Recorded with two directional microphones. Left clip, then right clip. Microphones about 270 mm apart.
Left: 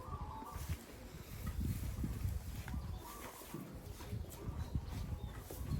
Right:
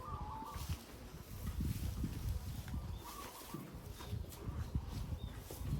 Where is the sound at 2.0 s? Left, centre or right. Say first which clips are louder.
Even; centre.